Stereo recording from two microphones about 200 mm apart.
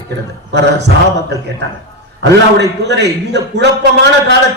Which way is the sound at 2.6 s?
60° right (ahead or behind).